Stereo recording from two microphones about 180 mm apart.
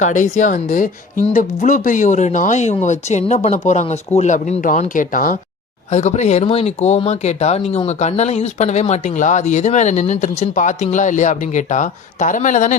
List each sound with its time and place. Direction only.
0.0 s speech: 45° left (ahead or behind)